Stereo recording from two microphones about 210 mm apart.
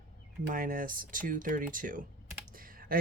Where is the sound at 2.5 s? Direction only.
40° right (ahead or behind).